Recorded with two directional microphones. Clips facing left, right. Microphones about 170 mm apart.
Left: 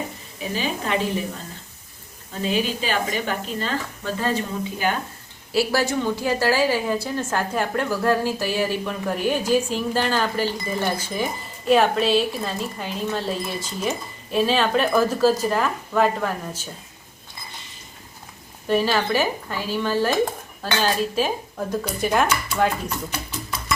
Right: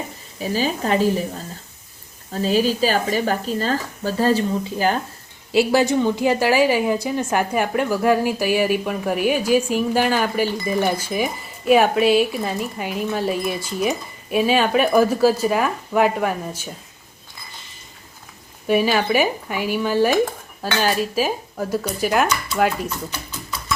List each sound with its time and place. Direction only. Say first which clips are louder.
0.5 s speech: right 4 dB; 40° right (ahead or behind)
2.3 s speech: right 5 dB; 40° right (ahead or behind)
5.5 s a woman's voice: right 5 dB; 20° right (ahead or behind)
18.7 s a woman's voice: right 3 dB; 10° right (ahead or behind)